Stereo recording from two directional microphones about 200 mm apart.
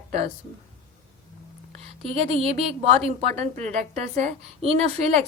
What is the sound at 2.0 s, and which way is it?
A woman's voice, 30° right (ahead or behind).